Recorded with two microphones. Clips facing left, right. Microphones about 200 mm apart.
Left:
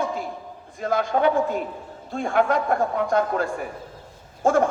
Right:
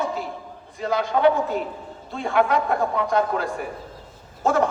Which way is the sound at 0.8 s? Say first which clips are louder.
Even; 50° left (ahead or behind).